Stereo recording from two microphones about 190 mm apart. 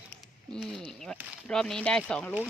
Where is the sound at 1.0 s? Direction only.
5° left (ahead or behind).